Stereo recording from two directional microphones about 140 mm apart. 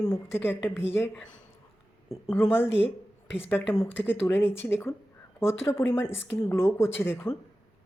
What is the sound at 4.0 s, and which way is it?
Speech, 15° left (ahead or behind).